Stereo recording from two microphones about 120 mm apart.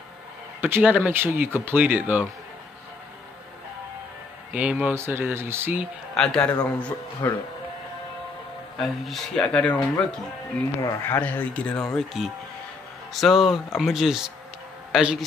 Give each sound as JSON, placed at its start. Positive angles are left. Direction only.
{"t": 0.6, "sound": "speech", "side_deg": -15}
{"t": 4.5, "sound": "speech", "side_deg": -10}
{"t": 6.1, "sound": "speech", "side_deg": 5}
{"t": 7.2, "sound": "speech", "side_deg": 25}
{"t": 8.7, "sound": "speech", "side_deg": 0}
{"t": 10.8, "sound": "speech", "side_deg": 20}
{"t": 13.1, "sound": "speech", "side_deg": 0}